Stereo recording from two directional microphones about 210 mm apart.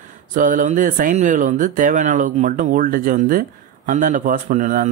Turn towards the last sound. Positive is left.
turn(degrees=-35)  # may be behind; listen again after turning